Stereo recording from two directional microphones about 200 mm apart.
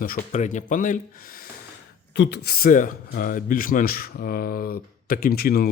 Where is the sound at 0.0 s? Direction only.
40° left (ahead or behind).